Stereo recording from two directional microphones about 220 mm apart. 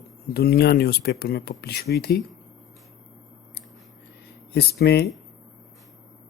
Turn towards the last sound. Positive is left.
turn(degrees=45)  # may be behind; listen again after turning